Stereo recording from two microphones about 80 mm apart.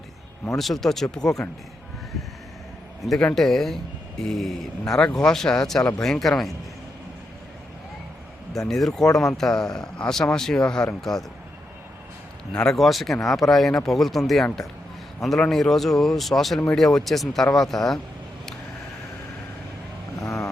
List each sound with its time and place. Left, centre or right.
0.5 s speech: centre
3.2 s a man's voice: centre
8.5 s a man's voice: centre
12.5 s speech: centre
20.2 s vehicle: left